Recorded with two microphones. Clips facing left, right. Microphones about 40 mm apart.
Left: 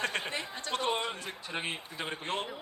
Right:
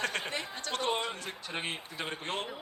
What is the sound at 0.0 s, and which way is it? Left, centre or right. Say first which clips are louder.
Speech: even; left.